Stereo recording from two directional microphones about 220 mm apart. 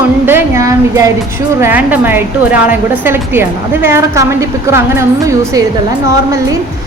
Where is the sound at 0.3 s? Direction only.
10° right (ahead or behind).